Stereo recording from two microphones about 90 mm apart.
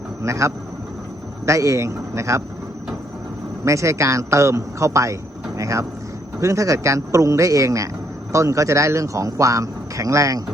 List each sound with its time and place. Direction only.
0.2 s speech: 35° right (ahead or behind)
3.6 s speech: 35° right (ahead or behind)